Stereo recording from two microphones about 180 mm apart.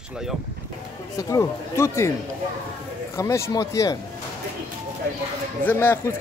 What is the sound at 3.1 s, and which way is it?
Speech, 15° left (ahead or behind).